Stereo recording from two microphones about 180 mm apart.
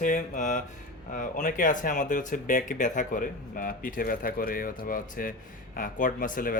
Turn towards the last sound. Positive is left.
turn(degrees=50)  # may be behind; listen again after turning